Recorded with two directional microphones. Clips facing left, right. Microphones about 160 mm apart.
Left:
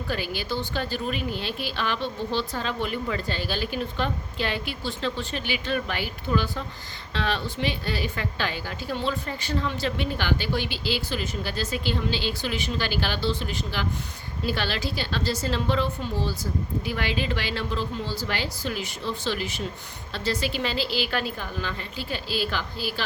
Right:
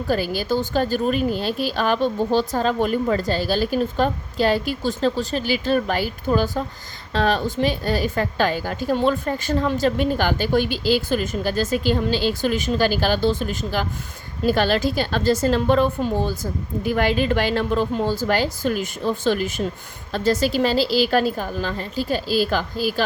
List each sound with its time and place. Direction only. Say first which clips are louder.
0.1 s a woman's voice: right 8 dB; 40° right (ahead or behind)